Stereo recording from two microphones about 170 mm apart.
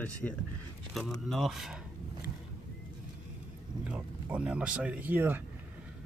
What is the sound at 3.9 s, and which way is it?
Speech, 5° right (ahead or behind).